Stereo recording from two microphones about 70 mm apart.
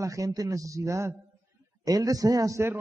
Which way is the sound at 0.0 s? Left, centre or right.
Right.